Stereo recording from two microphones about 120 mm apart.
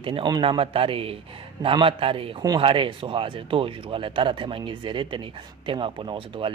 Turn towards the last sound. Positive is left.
turn(degrees=-45)  # may be behind; listen again after turning